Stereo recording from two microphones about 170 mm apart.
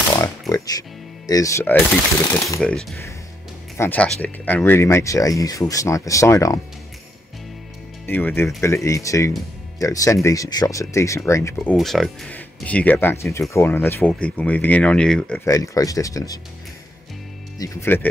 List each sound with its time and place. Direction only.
0.1 s music: 20° left (ahead or behind)
2.6 s speech: 5° left (ahead or behind); by 6.6 s 20° left (ahead or behind)
8.1 s speech: 10° left (ahead or behind)
11.7 s speech: centre (ahead or behind)
15.4 s speech: 20° left (ahead or behind)
17.6 s speech: 15° left (ahead or behind)